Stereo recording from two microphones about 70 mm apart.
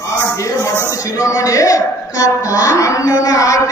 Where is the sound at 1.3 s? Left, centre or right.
Left.